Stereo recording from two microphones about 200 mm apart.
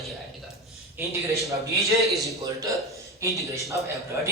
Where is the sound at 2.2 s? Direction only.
15° right (ahead or behind).